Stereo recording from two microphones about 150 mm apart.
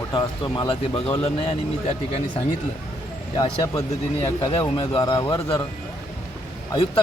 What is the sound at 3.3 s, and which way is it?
Speech, 25° left (ahead or behind).